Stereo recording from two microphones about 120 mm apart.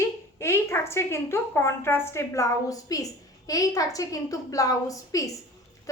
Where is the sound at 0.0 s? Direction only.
20° left (ahead or behind).